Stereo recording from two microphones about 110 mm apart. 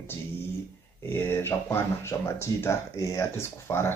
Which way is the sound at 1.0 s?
20° left (ahead or behind).